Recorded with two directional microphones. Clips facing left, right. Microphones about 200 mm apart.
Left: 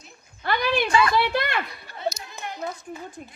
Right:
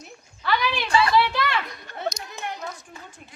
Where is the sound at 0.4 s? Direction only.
55° left (ahead or behind).